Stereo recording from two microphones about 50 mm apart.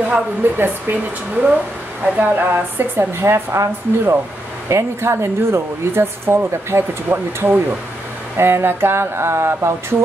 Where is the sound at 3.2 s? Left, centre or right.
Right.